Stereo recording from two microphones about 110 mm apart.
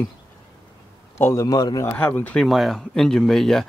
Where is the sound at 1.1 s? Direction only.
25° left (ahead or behind).